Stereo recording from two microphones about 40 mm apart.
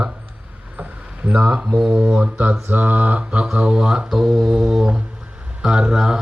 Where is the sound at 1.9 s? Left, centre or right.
Right.